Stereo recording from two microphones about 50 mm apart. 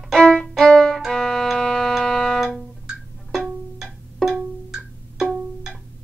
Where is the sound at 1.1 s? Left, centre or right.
Centre.